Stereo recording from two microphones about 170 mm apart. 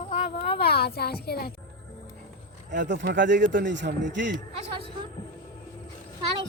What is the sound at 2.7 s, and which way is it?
Speech, 90° right.